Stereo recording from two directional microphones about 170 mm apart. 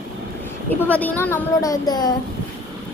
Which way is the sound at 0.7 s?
10° left (ahead or behind).